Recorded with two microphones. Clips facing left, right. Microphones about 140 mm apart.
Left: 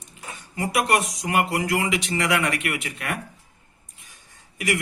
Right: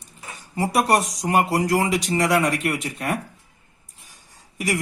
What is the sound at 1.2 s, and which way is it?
Speech, 35° right (ahead or behind).